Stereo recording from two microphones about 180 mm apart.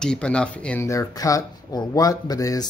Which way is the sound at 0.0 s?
5° left (ahead or behind).